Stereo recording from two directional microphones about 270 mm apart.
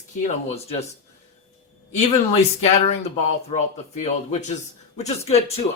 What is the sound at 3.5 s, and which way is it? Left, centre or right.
Speech, left.